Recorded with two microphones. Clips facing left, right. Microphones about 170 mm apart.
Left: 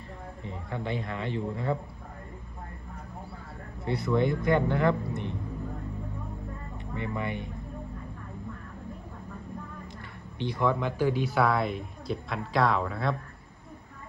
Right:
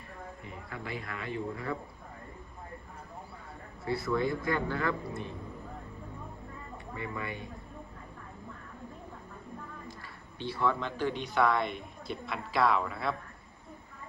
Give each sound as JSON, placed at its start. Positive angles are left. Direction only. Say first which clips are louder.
{"t": 0.4, "sound": "a man's voice", "louder": "left 9 dB", "side_deg": 25}
{"t": 3.8, "sound": "a man's voice", "louder": "left 4 dB", "side_deg": 20}
{"t": 6.9, "sound": "a man's voice", "louder": "left 6 dB", "side_deg": 25}
{"t": 10.3, "sound": "speech", "louder": "left 3 dB", "side_deg": 15}